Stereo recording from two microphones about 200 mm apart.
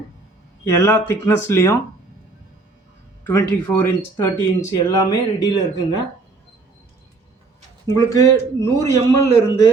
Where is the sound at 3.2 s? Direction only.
10° left (ahead or behind).